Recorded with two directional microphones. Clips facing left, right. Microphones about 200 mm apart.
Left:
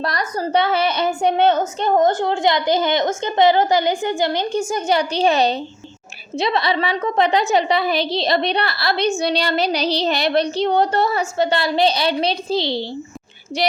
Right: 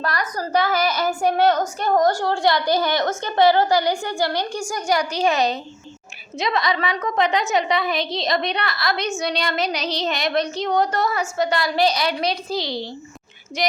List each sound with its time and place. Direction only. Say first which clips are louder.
0.0 s a woman's voice: left 3 dB; 30° left (ahead or behind)